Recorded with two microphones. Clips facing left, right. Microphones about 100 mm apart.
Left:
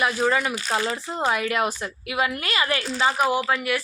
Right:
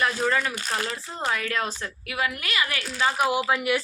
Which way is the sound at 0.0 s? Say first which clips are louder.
Left 2 dB; 10° left (ahead or behind).